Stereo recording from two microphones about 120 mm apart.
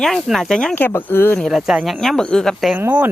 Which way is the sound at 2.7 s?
15° right (ahead or behind).